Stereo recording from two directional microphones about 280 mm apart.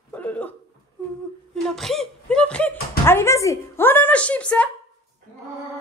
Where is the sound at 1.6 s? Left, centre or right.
Centre.